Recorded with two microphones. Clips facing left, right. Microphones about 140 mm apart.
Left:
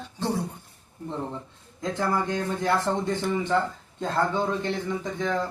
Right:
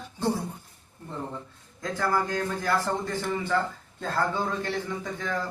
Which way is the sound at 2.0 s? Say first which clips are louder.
Even; 25° left (ahead or behind).